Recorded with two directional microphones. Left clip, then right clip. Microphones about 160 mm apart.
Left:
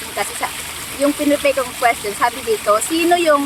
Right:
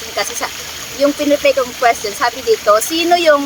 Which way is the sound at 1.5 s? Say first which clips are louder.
Right 4 dB; 20° right (ahead or behind).